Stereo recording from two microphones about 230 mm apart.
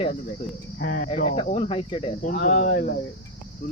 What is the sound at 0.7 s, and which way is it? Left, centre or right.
Speech, left.